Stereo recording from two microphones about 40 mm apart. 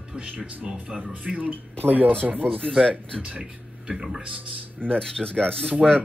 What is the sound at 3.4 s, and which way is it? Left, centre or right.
Speech, centre.